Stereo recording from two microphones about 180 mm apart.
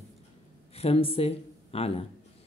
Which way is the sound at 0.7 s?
35° left (ahead or behind).